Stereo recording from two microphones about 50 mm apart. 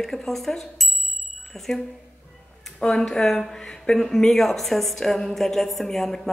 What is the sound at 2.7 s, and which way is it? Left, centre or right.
Speech, centre.